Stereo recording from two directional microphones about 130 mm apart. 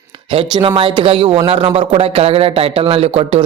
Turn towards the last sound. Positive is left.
turn(degrees=-50)  # may be behind; listen again after turning